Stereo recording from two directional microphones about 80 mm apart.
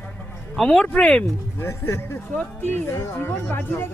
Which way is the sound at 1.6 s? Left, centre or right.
Left.